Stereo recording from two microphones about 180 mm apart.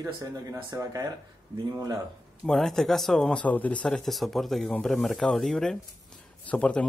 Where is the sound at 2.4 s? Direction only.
5° left (ahead or behind).